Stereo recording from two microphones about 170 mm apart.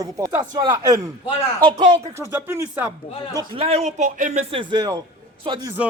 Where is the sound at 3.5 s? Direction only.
35° right (ahead or behind).